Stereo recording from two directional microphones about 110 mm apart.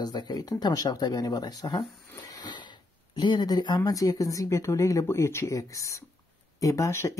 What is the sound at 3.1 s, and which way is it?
Speech, 40° left (ahead or behind).